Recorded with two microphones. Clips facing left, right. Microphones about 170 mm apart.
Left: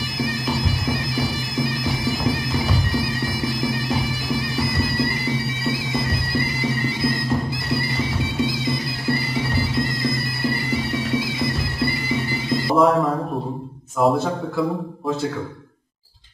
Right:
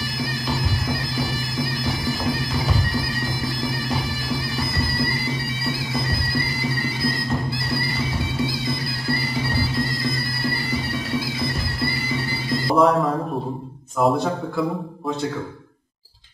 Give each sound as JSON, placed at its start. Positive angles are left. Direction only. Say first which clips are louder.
{"t": 0.8, "sound": "bagpipes", "louder": "left 2 dB", "side_deg": 20}
{"t": 3.4, "sound": "bagpipes", "louder": "left 4 dB", "side_deg": 20}
{"t": 6.6, "sound": "music", "louder": "left 2 dB", "side_deg": 20}
{"t": 8.4, "sound": "music", "louder": "left 3 dB", "side_deg": 20}
{"t": 12.1, "sound": "music", "louder": "left 2 dB", "side_deg": 20}
{"t": 12.7, "sound": "a man's voice", "louder": "even", "side_deg": 0}